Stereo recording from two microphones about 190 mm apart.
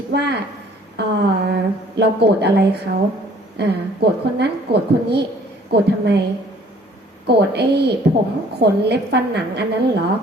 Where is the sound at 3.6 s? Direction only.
60° right (ahead or behind).